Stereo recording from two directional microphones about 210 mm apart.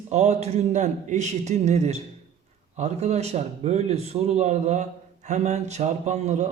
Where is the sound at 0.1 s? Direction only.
30° right (ahead or behind).